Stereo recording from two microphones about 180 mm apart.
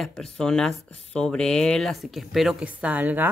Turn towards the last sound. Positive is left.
turn(degrees=-10)  # may be behind; listen again after turning